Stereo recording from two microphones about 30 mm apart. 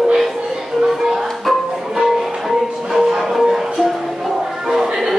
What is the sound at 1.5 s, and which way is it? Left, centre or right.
Music, centre.